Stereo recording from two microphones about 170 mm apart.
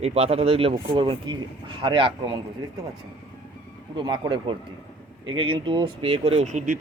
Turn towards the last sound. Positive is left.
turn(degrees=-50)  # may be behind; listen again after turning